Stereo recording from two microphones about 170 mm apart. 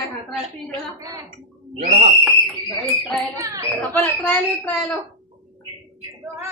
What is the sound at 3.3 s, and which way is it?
Speech, 20° right (ahead or behind).